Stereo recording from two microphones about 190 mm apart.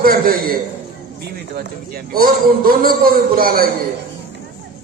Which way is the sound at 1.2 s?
55° right (ahead or behind).